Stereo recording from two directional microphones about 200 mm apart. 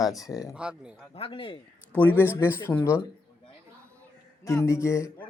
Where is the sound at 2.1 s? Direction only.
10° left (ahead or behind).